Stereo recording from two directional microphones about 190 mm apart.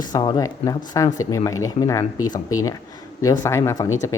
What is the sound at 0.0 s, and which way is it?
Speech, 20° left (ahead or behind).